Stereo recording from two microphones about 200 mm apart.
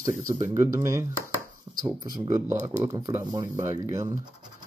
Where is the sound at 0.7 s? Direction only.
15° right (ahead or behind).